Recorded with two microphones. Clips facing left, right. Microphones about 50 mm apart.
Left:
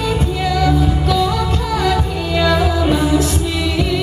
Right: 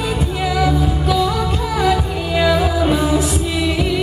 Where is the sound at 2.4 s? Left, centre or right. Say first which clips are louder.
Even; centre.